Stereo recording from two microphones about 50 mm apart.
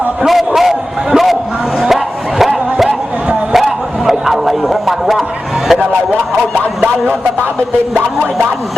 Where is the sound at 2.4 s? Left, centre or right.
Centre.